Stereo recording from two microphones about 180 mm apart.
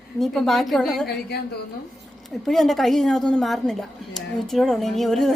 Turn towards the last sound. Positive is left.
turn(degrees=0)  # may be behind; listen again after turning